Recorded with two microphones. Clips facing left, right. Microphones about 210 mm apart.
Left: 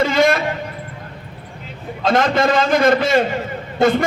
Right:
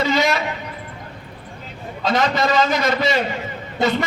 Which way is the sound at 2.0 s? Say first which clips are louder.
Left 3 dB; 50° left (ahead or behind).